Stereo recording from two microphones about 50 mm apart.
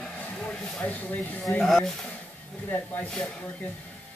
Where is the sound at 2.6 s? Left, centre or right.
Left.